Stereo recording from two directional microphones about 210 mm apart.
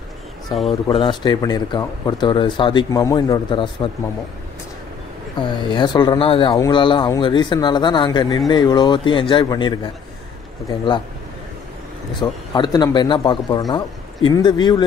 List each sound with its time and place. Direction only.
0.7 s speech: 20° left (ahead or behind)
5.4 s speech: 20° left (ahead or behind)
12.2 s speech: 20° left (ahead or behind)